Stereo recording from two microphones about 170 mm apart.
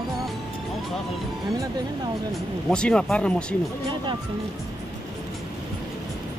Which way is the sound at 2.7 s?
5° left (ahead or behind).